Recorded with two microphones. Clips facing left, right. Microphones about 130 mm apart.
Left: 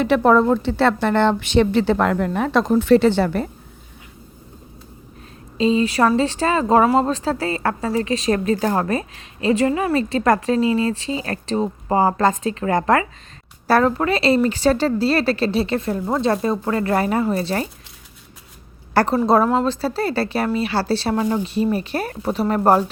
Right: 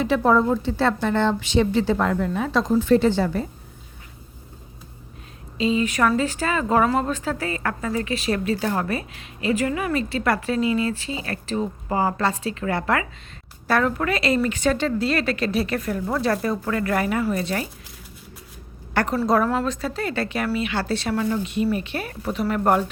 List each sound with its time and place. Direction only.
0.0 s a woman's voice: 65° left (ahead or behind)
5.5 s a woman's voice: 35° left (ahead or behind)
18.9 s a woman's voice: 30° left (ahead or behind)